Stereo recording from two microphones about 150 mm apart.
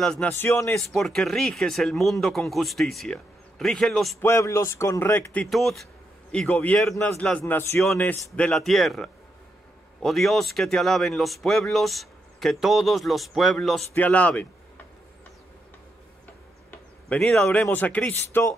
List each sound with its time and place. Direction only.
0.0 s speech: 5° left (ahead or behind)
0.3 s speech: 15° left (ahead or behind)
0.8 s speech: 5° left (ahead or behind)
4.2 s speech: 20° left (ahead or behind)
17.1 s speech: 5° left (ahead or behind)